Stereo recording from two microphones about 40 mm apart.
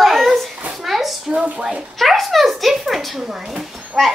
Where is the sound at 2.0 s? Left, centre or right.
Centre.